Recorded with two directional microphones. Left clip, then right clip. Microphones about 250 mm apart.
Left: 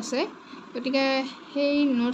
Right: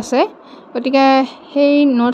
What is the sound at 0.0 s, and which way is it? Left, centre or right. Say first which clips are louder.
A woman's voice: right 13 dB; right.